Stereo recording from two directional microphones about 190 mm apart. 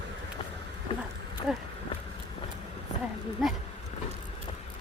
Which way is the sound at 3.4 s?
Centre (ahead or behind).